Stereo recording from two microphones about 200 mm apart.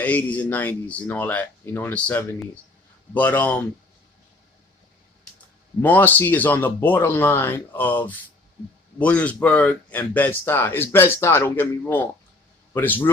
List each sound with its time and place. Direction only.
0.0 s speech: 10° left (ahead or behind)
5.8 s speech: 10° left (ahead or behind)